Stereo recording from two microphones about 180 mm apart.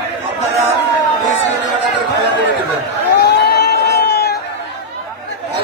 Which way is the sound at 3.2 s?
65° left (ahead or behind).